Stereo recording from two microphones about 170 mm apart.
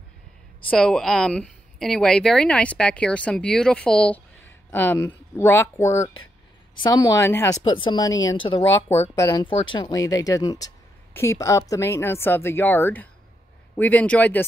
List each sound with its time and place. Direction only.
0.7 s a woman's voice: 5° left (ahead or behind); by 9.1 s 40° left (ahead or behind)
9.1 s a woman's voice: 20° left (ahead or behind)